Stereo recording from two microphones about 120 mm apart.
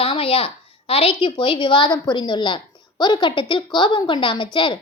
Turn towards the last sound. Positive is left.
turn(degrees=45)  # may be behind; listen again after turning